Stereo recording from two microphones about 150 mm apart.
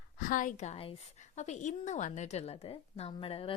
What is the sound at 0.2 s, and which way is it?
A woman's voice, 65° left (ahead or behind).